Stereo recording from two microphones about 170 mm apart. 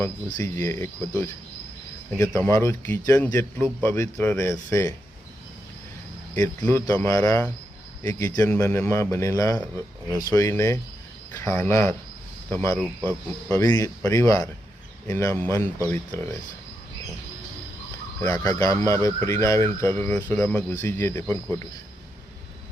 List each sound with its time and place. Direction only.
0.3 s speech: 15° left (ahead or behind)
6.6 s speech: 15° left (ahead or behind)
13.1 s speech: 15° left (ahead or behind)
18.2 s speech: 20° left (ahead or behind)